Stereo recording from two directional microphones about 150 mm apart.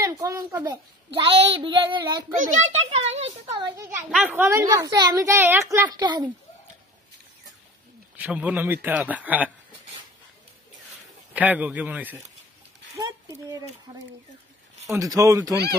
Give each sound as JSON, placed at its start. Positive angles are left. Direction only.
{"t": 0.0, "sound": "a child's voice", "side_deg": -20}
{"t": 1.1, "sound": "child singing", "side_deg": -35}
{"t": 2.3, "sound": "a child's voice", "side_deg": -60}
{"t": 2.9, "sound": "a child's voice", "side_deg": -45}
{"t": 3.6, "sound": "a child's voice", "side_deg": -20}
{"t": 4.1, "sound": "a man's voice", "side_deg": -10}
{"t": 4.9, "sound": "a child's voice", "side_deg": -25}
{"t": 8.2, "sound": "a man's voice", "side_deg": -10}
{"t": 11.3, "sound": "a man's voice", "side_deg": -10}
{"t": 13.0, "sound": "a child's voice", "side_deg": -25}